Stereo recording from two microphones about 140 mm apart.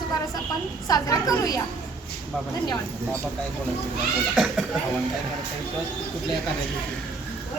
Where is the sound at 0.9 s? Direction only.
25° left (ahead or behind).